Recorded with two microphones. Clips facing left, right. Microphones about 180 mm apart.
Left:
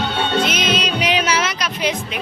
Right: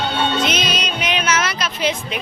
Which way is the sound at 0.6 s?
30° left (ahead or behind).